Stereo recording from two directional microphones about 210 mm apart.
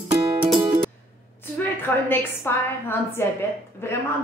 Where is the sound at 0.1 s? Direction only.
25° right (ahead or behind).